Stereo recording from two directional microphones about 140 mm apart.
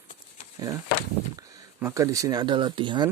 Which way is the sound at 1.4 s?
25° right (ahead or behind).